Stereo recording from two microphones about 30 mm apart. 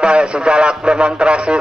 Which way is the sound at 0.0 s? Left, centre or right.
Right.